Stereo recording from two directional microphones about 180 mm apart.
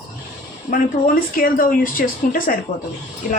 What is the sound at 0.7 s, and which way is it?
Speech, 50° left (ahead or behind).